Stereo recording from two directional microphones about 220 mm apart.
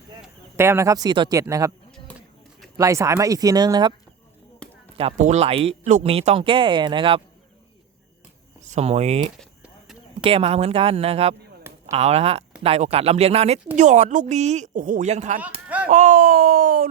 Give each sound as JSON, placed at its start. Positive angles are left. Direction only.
{"t": 0.2, "sound": "speech", "side_deg": -10}
{"t": 2.1, "sound": "a sound", "side_deg": 5}
{"t": 2.7, "sound": "speech", "side_deg": -15}
{"t": 4.6, "sound": "chop", "side_deg": 5}
{"t": 4.9, "sound": "speech", "side_deg": -30}
{"t": 8.6, "sound": "speech", "side_deg": -30}
{"t": 9.4, "sound": "clip-clop", "side_deg": 0}
{"t": 10.2, "sound": "a woman's voice", "side_deg": -25}